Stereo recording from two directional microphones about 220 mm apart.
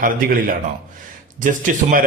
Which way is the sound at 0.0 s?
40° right (ahead or behind).